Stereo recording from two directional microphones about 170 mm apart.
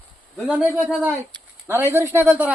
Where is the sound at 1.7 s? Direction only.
15° right (ahead or behind).